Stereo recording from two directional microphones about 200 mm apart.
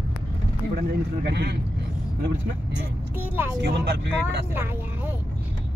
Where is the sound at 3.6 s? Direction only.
55° right (ahead or behind).